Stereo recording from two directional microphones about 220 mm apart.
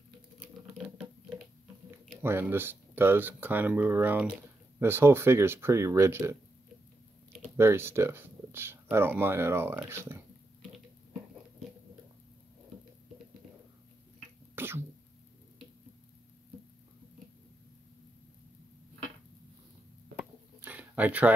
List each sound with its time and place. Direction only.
2.2 s speech: 10° right (ahead or behind)
7.5 s speech: 10° right (ahead or behind)
14.5 s sneeze: 10° right (ahead or behind)
20.6 s a sound: 5° right (ahead or behind)